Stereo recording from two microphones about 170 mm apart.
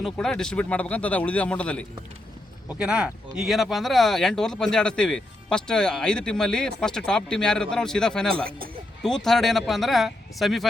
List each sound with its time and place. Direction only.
0.0 s speech: 5° left (ahead or behind)
2.7 s speech: 5° right (ahead or behind)
8.4 s speech: 60° right (ahead or behind)
9.0 s speech: 5° left (ahead or behind)